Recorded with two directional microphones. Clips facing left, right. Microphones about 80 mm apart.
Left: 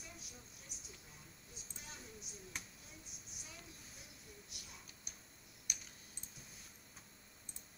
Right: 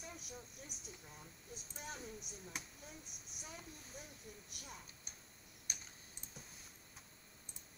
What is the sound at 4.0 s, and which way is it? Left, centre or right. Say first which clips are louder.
Speech: right 4 dB; right.